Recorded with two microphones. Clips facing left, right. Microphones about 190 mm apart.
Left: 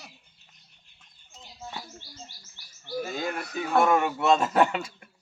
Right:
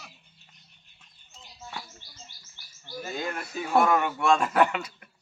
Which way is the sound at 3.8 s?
25° left (ahead or behind).